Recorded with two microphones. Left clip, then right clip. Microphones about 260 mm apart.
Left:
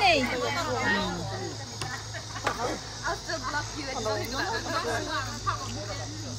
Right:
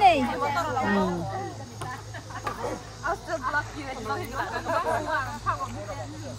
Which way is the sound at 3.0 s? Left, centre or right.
Right.